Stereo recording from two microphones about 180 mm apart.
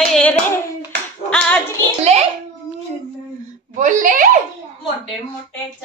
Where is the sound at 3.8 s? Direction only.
50° right (ahead or behind).